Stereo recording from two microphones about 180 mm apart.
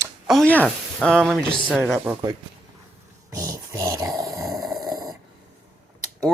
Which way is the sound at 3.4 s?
20° right (ahead or behind).